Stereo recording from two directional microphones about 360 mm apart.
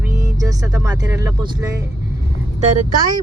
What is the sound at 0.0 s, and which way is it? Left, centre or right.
Speech, centre.